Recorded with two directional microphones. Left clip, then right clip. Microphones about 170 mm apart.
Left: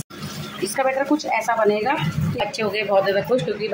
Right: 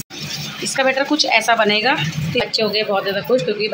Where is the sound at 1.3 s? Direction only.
10° right (ahead or behind).